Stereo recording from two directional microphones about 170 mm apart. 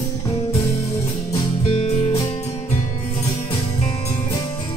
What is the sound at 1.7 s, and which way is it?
Music, 35° left (ahead or behind).